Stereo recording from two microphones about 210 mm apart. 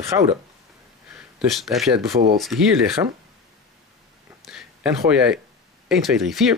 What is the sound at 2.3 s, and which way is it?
Speech, centre (ahead or behind).